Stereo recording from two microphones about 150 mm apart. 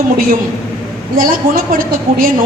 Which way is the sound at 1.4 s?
70° right (ahead or behind).